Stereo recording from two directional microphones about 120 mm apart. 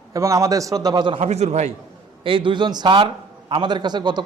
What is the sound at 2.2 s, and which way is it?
Speech, 45° right (ahead or behind).